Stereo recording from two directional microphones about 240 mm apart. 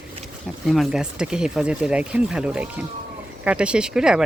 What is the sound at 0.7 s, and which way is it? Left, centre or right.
Speech, centre.